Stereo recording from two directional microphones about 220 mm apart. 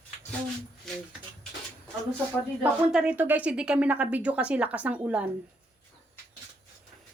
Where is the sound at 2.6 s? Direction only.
5° right (ahead or behind).